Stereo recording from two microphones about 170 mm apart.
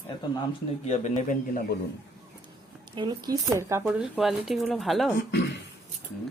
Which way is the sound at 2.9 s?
25° right (ahead or behind).